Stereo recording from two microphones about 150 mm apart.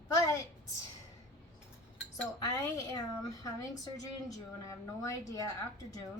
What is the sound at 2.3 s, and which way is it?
Speech, 20° left (ahead or behind).